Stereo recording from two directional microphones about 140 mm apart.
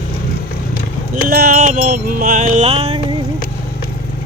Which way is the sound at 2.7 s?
45° right (ahead or behind).